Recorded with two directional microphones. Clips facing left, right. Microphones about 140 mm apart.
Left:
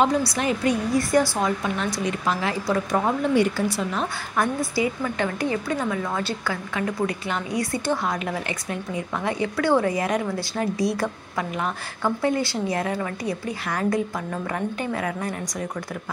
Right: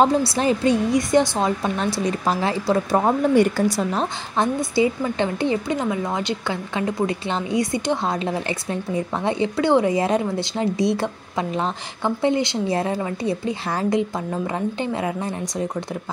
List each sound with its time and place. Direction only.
0.2 s a woman's voice: 30° right (ahead or behind)
1.6 s speech: 35° right (ahead or behind)
4.4 s a woman's voice: 25° right (ahead or behind)